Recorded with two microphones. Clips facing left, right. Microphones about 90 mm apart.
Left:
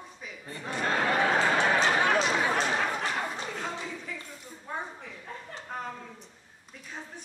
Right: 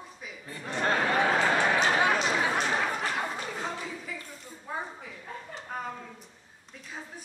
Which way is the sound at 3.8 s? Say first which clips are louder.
Even; 5° right (ahead or behind).